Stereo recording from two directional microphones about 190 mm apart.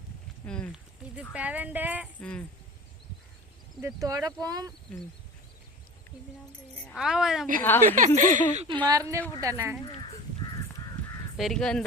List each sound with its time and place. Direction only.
0.4 s a woman's voice: 5° left (ahead or behind)
1.3 s speech: 5° right (ahead or behind)
2.2 s a woman's voice: 5° left (ahead or behind)
3.8 s speech: 15° right (ahead or behind)
6.8 s a woman's voice: centre (ahead or behind)
7.6 s a woman's voice: 10° left (ahead or behind)
7.9 s speech: 40° right (ahead or behind)
8.9 s speech: 15° right (ahead or behind)
11.3 s a woman's voice: centre (ahead or behind)